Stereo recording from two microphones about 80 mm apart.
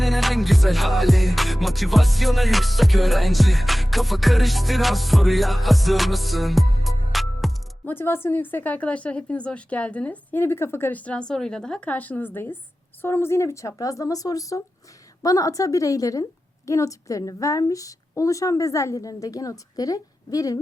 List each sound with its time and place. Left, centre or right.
0.0 s music: centre
7.9 s a woman's voice: left
10.4 s a woman's voice: left; by 11.9 s centre
11.9 s a woman's voice: left